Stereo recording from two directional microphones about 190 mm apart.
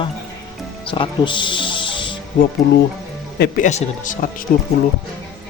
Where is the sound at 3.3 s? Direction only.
60° left (ahead or behind).